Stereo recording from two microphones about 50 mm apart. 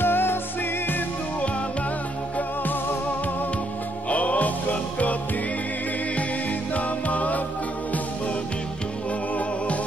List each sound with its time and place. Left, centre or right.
0.0 s music: left
2.3 s music: left
6.7 s music: left